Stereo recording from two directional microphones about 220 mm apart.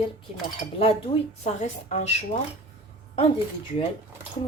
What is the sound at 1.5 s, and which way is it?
Speech, 30° left (ahead or behind).